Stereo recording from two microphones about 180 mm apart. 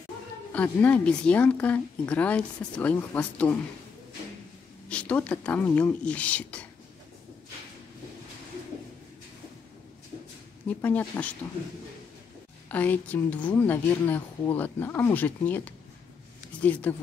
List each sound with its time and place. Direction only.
0.5 s a woman's voice: 5° left (ahead or behind)
4.8 s a woman's voice: 5° left (ahead or behind)
10.7 s a woman's voice: 10° left (ahead or behind)
12.6 s a woman's voice: 10° left (ahead or behind)